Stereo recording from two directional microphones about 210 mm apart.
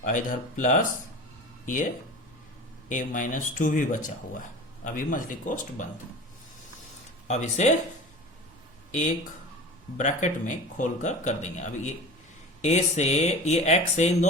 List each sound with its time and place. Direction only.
0.0 s speech: 40° left (ahead or behind)
2.9 s speech: 35° left (ahead or behind)
7.3 s speech: 30° left (ahead or behind)
8.9 s speech: 35° left (ahead or behind)